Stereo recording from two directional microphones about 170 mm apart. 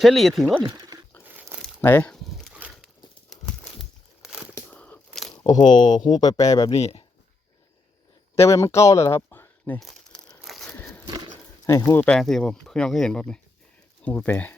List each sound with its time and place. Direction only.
0.0 s speech: centre (ahead or behind)
0.7 s speech: 20° right (ahead or behind)
1.6 s pulleys: 10° left (ahead or behind); by 2.9 s 5° right (ahead or behind)
3.2 s crumpling: centre (ahead or behind)
4.5 s crushing: 10° left (ahead or behind)
5.3 s speech: 25° left (ahead or behind)
6.7 s speech: 40° left (ahead or behind)
8.4 s speech: 15° left (ahead or behind)
9.8 s crumpling: centre (ahead or behind)
10.8 s a sound: 15° left (ahead or behind)
11.0 s horse: 25° right (ahead or behind)
11.6 s speech: 20° left (ahead or behind)
12.1 s speech: 5° left (ahead or behind)